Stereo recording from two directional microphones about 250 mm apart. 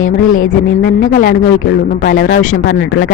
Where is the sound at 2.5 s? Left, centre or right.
Left.